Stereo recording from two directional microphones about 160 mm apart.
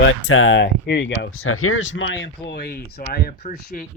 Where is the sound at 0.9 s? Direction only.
90° left.